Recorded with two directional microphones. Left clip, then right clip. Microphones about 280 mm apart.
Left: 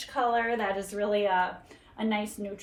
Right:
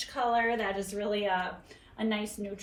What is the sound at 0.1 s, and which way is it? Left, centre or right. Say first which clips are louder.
A woman's voice: left 2 dB; centre.